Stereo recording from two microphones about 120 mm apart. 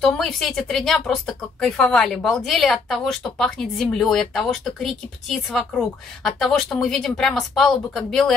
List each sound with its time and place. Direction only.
0.0 s speech: centre (ahead or behind)